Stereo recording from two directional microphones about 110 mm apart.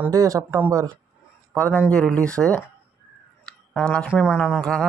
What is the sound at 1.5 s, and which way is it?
Speech, 15° left (ahead or behind).